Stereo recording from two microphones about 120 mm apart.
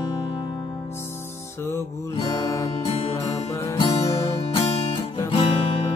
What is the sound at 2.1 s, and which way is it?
Music, 30° left (ahead or behind).